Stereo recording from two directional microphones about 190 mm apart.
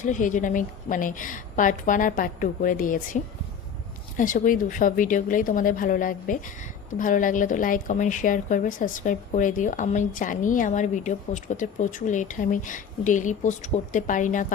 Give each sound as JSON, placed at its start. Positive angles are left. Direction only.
{"t": 0.0, "sound": "speech", "side_deg": 45}
{"t": 4.2, "sound": "speech", "side_deg": 45}